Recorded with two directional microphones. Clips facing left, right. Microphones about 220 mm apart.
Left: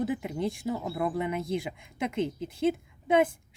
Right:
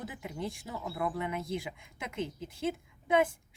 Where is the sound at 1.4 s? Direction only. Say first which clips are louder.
Left 5 dB; 65° left (ahead or behind).